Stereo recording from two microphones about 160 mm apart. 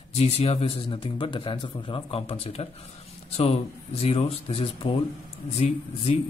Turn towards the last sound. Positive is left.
turn(degrees=40)  # may be behind; listen again after turning